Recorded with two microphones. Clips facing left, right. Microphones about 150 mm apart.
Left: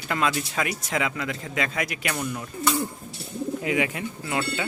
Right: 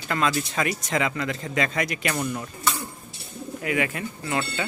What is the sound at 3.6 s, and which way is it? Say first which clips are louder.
Speech: right 2 dB; 15° left (ahead or behind).